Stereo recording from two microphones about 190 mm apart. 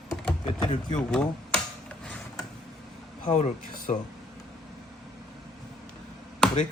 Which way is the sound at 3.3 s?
35° left (ahead or behind).